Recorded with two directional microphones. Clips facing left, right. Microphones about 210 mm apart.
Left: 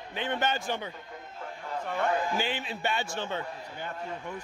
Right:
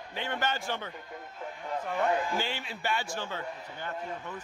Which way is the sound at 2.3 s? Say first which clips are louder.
Left 2 dB; 15° left (ahead or behind).